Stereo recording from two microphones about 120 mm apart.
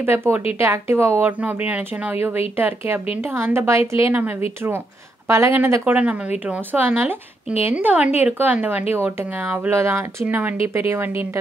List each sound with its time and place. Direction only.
0.0 s speech: 20° right (ahead or behind)
5.3 s speech: 20° right (ahead or behind)